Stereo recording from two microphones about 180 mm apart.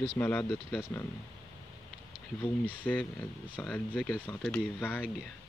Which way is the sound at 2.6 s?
10° left (ahead or behind).